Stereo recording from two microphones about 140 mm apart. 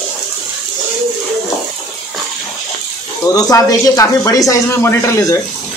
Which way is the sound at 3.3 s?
25° left (ahead or behind).